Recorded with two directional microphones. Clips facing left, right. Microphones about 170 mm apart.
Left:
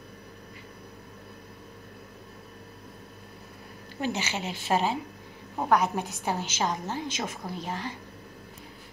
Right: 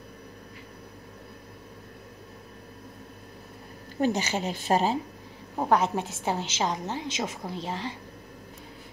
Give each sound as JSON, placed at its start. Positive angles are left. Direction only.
{"t": 4.0, "sound": "speech", "side_deg": -40}
{"t": 5.7, "sound": "a woman's voice", "side_deg": -25}